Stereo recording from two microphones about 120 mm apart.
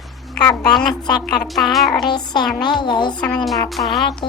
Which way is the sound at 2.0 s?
35° left (ahead or behind).